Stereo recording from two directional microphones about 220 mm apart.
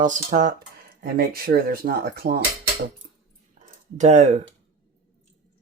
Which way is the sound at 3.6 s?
35° right (ahead or behind).